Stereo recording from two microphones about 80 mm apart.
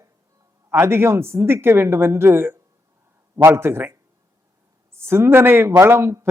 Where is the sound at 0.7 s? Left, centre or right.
Right.